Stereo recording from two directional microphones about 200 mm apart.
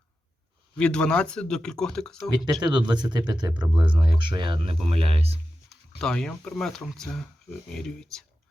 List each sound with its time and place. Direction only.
0.8 s speech: 5° left (ahead or behind)
2.3 s speech: 20° right (ahead or behind)
5.6 s speech: 5° left (ahead or behind)